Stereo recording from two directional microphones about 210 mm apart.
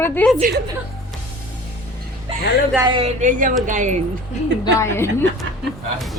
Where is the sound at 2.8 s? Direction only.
25° right (ahead or behind).